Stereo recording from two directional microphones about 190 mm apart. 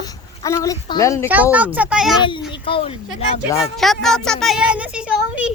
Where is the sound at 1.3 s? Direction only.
10° right (ahead or behind).